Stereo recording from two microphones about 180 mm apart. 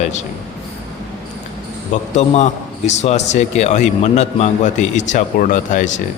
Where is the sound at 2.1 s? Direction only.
40° left (ahead or behind).